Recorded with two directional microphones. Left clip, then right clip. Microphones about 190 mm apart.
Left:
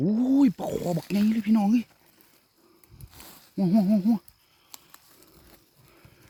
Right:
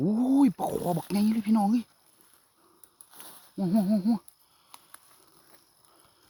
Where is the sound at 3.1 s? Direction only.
25° left (ahead or behind).